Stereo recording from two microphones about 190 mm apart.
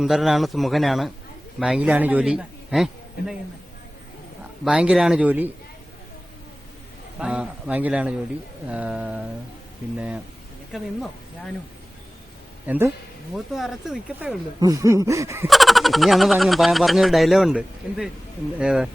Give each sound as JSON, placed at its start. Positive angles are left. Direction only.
{"t": 0.0, "sound": "a man's voice", "side_deg": 0}
{"t": 4.6, "sound": "speech", "side_deg": -5}
{"t": 7.2, "sound": "a man's voice", "side_deg": -5}
{"t": 10.7, "sound": "speech", "side_deg": 0}
{"t": 12.6, "sound": "speech", "side_deg": -10}
{"t": 14.6, "sound": "a man's voice", "side_deg": -15}
{"t": 15.4, "sound": "speech", "side_deg": 0}